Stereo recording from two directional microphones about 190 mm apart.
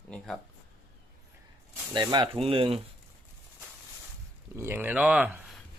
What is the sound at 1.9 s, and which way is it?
Speech, 25° right (ahead or behind).